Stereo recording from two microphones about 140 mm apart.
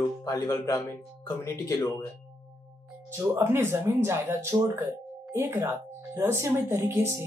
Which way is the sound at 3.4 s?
15° right (ahead or behind).